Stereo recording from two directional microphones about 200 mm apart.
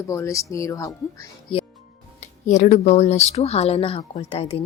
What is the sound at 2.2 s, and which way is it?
A woman's voice, 35° left (ahead or behind).